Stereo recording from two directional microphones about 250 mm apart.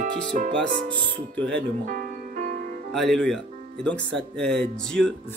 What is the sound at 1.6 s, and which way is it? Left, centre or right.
Music, right.